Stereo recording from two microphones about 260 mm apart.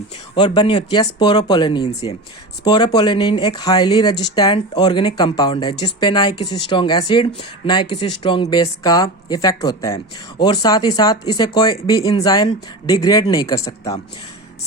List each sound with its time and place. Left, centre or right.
0.3 s speech: centre